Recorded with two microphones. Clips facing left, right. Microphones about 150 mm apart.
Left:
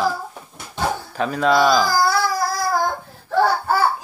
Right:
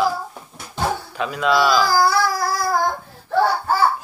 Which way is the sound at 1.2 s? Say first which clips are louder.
Left 2 dB; 40° left (ahead or behind).